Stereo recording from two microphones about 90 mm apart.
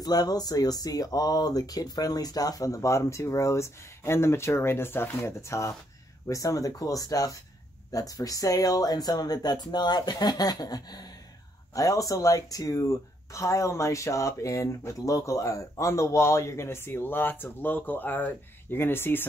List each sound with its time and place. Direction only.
0.0 s speech: 50° left (ahead or behind); by 19.2 s 25° left (ahead or behind)